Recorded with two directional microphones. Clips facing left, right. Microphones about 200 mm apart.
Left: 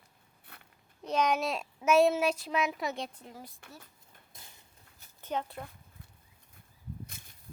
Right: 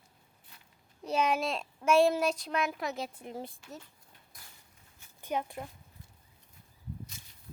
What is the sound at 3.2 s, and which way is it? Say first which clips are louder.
Child singing: right 7 dB; 25° right (ahead or behind).